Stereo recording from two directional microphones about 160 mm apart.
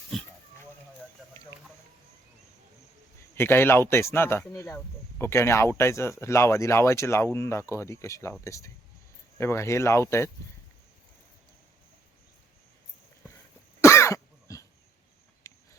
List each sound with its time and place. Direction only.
3.3 s speech: 15° left (ahead or behind)
13.8 s cough: 15° left (ahead or behind)
15.4 s a sound: 20° left (ahead or behind)